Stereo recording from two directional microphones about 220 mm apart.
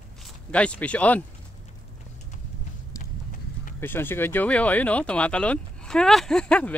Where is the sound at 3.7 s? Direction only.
10° left (ahead or behind).